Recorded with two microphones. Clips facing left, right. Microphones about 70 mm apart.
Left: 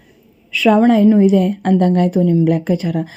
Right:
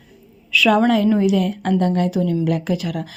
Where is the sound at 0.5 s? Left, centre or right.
Left.